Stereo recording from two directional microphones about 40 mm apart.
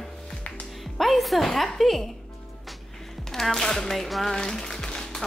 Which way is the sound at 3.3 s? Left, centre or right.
Centre.